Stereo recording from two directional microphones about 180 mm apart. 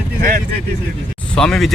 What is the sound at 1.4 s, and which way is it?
Speech, 5° left (ahead or behind).